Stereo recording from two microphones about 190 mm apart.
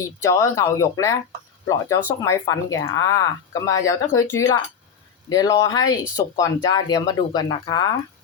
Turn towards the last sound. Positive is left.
turn(degrees=20)  # may be behind; listen again after turning